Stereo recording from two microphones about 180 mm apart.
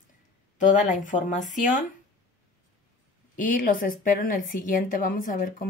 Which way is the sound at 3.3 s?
50° left (ahead or behind).